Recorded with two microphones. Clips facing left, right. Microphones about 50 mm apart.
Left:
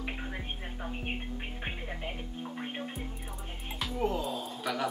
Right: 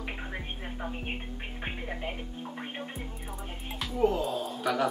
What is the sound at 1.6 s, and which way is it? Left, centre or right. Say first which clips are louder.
Speech: right 6 dB; centre.